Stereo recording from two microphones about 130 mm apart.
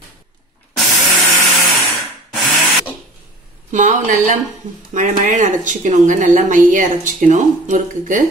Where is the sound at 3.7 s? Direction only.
75° right (ahead or behind).